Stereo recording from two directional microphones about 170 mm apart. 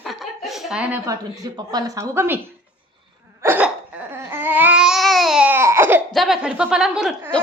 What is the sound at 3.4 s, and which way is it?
Babbling, 10° right (ahead or behind).